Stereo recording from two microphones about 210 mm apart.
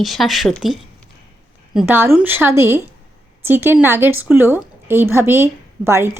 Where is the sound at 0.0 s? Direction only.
Centre (ahead or behind).